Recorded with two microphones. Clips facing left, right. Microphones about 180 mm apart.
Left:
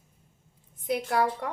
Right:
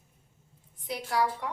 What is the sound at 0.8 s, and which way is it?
Speech, 50° left (ahead or behind).